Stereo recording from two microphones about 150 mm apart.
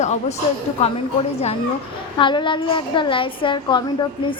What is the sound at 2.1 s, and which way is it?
A woman's voice, 30° left (ahead or behind).